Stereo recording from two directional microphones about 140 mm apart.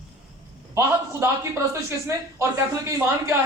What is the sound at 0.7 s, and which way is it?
A man's voice, 20° right (ahead or behind).